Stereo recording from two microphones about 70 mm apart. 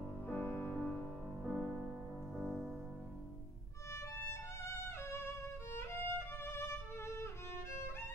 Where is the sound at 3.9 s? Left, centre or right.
Left.